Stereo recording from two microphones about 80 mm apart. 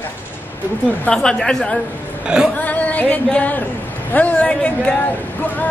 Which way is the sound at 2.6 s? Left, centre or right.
Centre.